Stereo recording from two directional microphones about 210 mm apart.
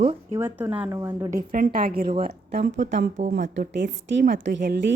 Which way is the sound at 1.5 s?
45° right (ahead or behind).